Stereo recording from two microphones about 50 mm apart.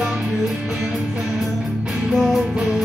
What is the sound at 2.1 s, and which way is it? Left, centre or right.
Music, centre.